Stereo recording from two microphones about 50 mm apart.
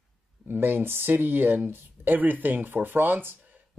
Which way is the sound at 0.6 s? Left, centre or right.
Right.